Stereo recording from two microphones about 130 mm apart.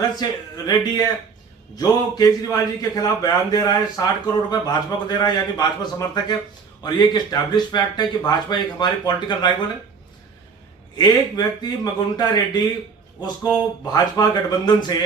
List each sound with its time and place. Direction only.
0.2 s a man's voice: 30° left (ahead or behind)
10.9 s speech: 35° left (ahead or behind)
13.8 s speech: 30° left (ahead or behind)